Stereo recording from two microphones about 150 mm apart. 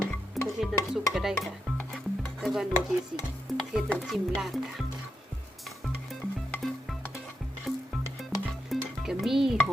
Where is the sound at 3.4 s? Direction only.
Centre (ahead or behind).